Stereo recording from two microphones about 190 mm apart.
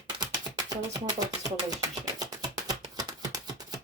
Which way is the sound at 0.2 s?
20° right (ahead or behind).